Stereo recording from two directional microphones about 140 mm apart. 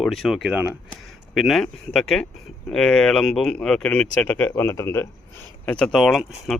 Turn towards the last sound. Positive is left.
turn(degrees=0)  # may be behind; listen again after turning